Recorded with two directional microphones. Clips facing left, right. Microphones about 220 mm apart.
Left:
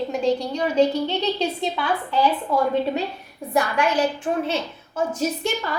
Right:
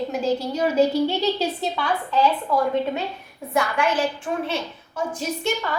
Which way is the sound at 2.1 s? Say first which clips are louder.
Right 1 dB; 15° left (ahead or behind).